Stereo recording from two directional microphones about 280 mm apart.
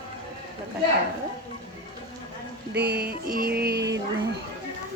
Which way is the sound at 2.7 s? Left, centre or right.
Right.